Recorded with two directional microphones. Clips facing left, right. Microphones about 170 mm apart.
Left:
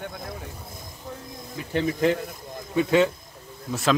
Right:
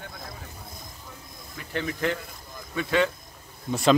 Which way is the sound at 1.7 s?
20° left (ahead or behind).